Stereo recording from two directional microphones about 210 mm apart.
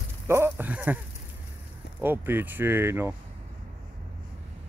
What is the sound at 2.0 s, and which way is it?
Speech, 10° right (ahead or behind).